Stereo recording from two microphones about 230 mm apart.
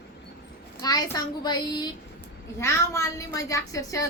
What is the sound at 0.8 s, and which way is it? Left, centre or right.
A woman's voice, centre.